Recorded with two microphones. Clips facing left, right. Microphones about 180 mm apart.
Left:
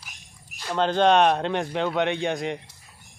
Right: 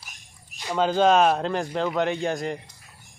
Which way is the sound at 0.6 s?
10° right (ahead or behind).